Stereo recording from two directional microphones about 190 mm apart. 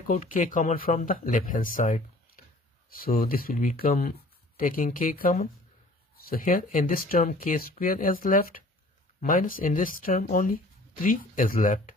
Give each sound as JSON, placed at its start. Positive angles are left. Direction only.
{"t": 0.0, "sound": "speech", "side_deg": 45}